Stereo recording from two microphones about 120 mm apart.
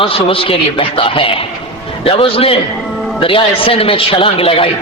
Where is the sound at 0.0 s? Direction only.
50° left (ahead or behind).